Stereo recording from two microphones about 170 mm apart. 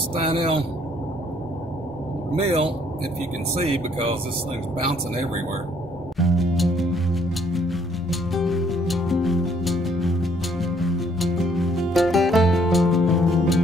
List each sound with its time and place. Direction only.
0.1 s speech: 30° right (ahead or behind)
2.4 s speech: 30° right (ahead or behind)
6.1 s music: centre (ahead or behind)